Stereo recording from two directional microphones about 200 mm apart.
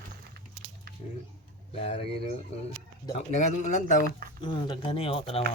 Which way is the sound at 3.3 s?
35° left (ahead or behind).